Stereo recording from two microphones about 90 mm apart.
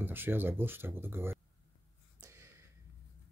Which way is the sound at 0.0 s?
25° right (ahead or behind).